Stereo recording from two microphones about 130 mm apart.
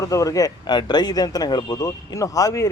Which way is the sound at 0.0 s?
25° left (ahead or behind).